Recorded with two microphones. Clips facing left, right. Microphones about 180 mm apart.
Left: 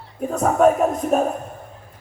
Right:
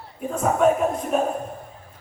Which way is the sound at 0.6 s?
45° left (ahead or behind).